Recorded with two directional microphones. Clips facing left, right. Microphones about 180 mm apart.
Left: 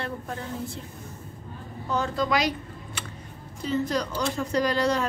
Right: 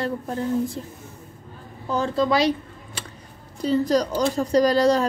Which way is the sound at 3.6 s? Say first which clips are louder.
Right 6 dB; 35° right (ahead or behind).